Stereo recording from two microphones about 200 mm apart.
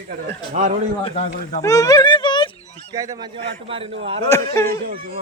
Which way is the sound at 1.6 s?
15° left (ahead or behind).